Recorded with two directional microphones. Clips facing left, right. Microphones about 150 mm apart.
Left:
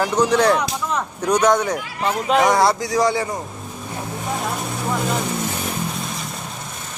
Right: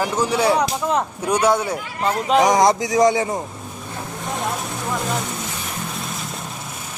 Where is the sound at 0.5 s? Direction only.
30° right (ahead or behind).